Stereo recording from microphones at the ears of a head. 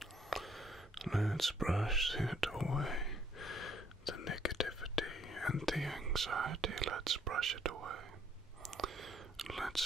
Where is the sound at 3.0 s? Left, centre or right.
Left.